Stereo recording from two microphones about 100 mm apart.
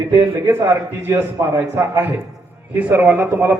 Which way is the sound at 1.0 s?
25° right (ahead or behind).